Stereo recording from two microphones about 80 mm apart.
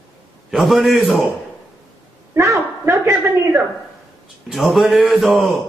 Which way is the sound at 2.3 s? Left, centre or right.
Right.